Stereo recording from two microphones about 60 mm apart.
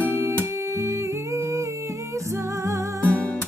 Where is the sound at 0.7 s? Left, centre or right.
Right.